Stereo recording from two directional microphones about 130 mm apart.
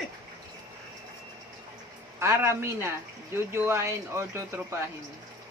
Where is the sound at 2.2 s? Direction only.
20° right (ahead or behind).